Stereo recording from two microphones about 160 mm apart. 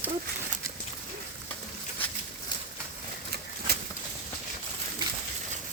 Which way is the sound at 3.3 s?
90° right.